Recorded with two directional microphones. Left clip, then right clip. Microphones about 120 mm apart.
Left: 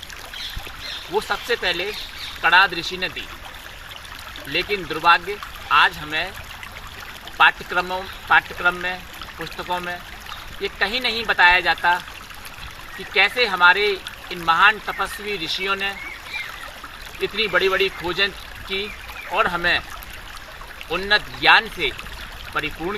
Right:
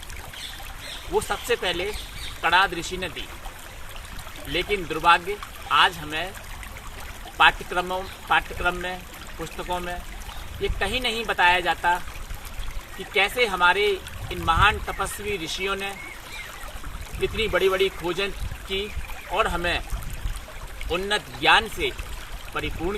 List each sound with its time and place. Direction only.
1.1 s speech: 20° right (ahead or behind)
4.5 s speech: 15° right (ahead or behind)
7.3 s speech: 10° right (ahead or behind)
13.1 s speech: 15° right (ahead or behind)
17.2 s speech: 15° right (ahead or behind)
20.9 s speech: 15° right (ahead or behind)